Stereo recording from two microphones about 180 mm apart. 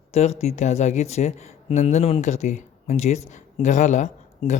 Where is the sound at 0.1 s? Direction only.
35° left (ahead or behind).